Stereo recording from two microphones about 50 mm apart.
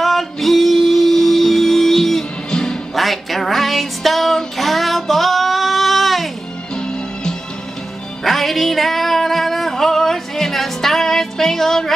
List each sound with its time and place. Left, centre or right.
0.0 s music: centre
2.9 s music: centre
6.7 s music: centre
8.2 s music: centre